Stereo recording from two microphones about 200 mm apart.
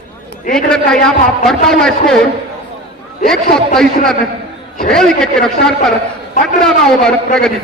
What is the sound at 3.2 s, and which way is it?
Speech, centre (ahead or behind).